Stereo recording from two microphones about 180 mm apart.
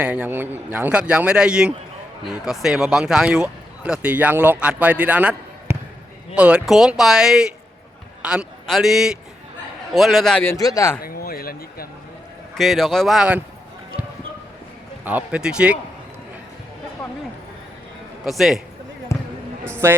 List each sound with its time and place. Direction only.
0.0 s a man's voice: 5° right (ahead or behind)
10.4 s speech: 15° left (ahead or behind)
11.0 s speech: 55° left (ahead or behind)
12.5 s speech: centre (ahead or behind)
15.0 s speech: 10° right (ahead or behind)
18.3 s speech: centre (ahead or behind)
19.1 s basketball bounce: 15° left (ahead or behind)
19.8 s speech: 15° right (ahead or behind)